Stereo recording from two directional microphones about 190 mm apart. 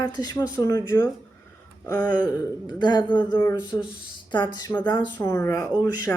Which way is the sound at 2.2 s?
20° left (ahead or behind).